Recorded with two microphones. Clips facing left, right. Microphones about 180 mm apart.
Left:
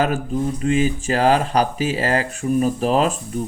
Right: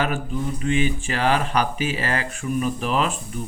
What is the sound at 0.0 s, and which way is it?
Speech, 40° left (ahead or behind).